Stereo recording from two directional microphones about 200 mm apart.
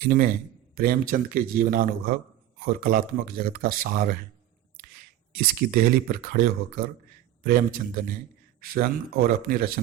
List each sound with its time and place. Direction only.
0.0 s speech: 45° right (ahead or behind)
5.3 s speech: 45° right (ahead or behind)